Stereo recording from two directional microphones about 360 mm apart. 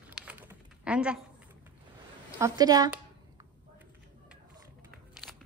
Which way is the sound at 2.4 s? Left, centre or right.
Centre.